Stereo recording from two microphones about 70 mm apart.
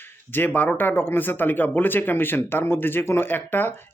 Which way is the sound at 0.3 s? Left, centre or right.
Left.